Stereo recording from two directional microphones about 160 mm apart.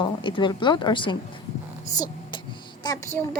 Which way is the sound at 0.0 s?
30° left (ahead or behind).